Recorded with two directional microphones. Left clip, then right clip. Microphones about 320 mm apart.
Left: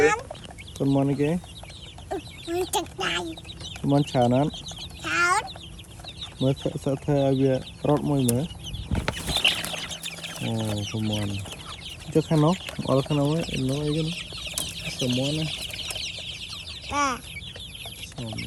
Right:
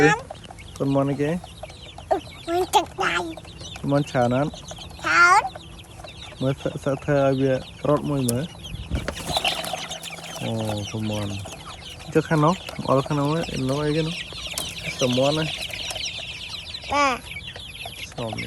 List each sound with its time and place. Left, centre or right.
0.9 s speech: centre
3.8 s chicken: centre
6.4 s speech: centre
9.0 s chicken: centre
12.1 s speech: centre
13.7 s speech: centre
13.9 s chicken: centre
16.9 s chicken: centre